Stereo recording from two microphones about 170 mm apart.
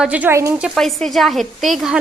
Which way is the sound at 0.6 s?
Centre (ahead or behind).